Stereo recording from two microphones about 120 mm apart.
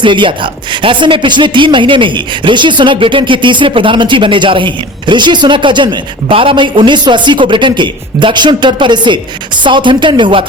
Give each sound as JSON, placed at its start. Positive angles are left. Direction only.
{"t": 0.0, "sound": "speech", "side_deg": -45}